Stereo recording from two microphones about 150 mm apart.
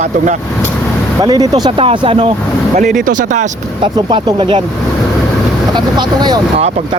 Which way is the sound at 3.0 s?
60° right (ahead or behind).